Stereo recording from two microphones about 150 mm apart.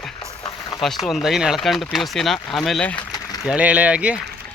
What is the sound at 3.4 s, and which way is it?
Speech, 10° right (ahead or behind).